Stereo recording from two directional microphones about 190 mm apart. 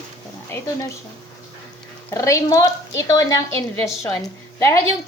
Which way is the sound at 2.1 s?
15° left (ahead or behind).